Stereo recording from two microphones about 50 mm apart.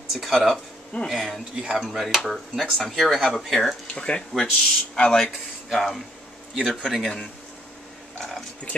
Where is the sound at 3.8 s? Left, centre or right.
Left.